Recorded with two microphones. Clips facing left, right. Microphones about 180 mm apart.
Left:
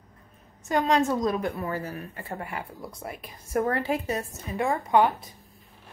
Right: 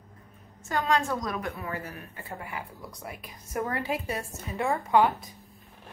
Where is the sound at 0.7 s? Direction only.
20° left (ahead or behind); by 3.9 s 35° left (ahead or behind).